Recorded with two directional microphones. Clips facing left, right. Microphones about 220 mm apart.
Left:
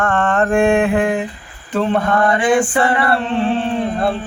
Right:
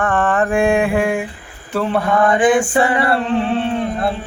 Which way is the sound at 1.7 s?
5° right (ahead or behind).